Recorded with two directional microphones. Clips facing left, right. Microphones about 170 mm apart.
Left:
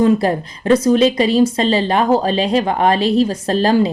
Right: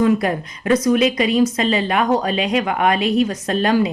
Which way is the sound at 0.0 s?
30° left (ahead or behind).